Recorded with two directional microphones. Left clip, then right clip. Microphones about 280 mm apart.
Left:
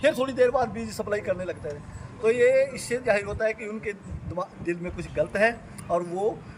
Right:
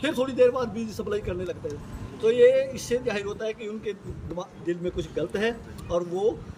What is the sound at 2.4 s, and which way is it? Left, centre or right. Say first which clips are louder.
Speech: right 3 dB; centre.